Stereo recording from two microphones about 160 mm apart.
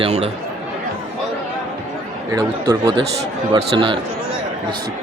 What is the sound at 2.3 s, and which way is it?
Speech, 20° right (ahead or behind).